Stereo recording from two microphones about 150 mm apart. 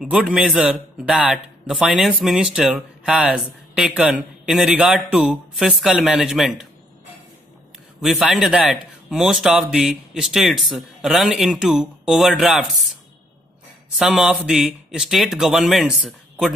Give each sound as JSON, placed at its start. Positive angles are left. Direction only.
{"t": 0.0, "sound": "speech", "side_deg": -5}
{"t": 8.0, "sound": "speech", "side_deg": 0}
{"t": 13.9, "sound": "speech", "side_deg": -5}